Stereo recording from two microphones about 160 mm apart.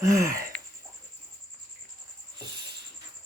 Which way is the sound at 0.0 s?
20° right (ahead or behind).